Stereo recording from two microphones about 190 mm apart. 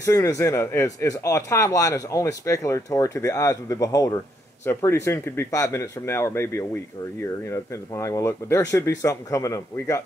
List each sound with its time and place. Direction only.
0.0 s a man's voice: 15° left (ahead or behind)